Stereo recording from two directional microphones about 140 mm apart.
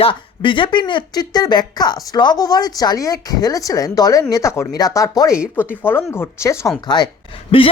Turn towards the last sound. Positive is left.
turn(degrees=40)  # may be behind; listen again after turning